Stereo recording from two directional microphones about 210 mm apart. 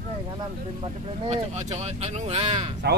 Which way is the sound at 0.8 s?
35° right (ahead or behind).